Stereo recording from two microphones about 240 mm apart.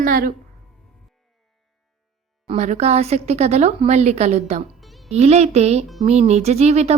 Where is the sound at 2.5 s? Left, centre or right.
Right.